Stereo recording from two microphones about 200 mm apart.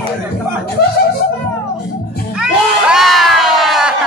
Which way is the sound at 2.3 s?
5° right (ahead or behind).